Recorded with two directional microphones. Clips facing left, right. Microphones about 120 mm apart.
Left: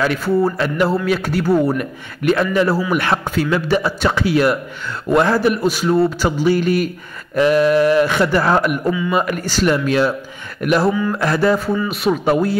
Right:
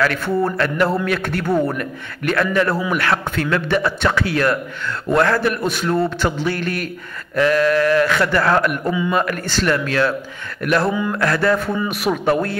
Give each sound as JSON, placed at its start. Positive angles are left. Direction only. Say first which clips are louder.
{"t": 0.2, "sound": "a man's voice", "louder": "left 2 dB", "side_deg": 5}
{"t": 1.8, "sound": "a man's voice", "louder": "left 2 dB", "side_deg": 15}
{"t": 11.9, "sound": "a man's voice", "louder": "left 1 dB", "side_deg": 0}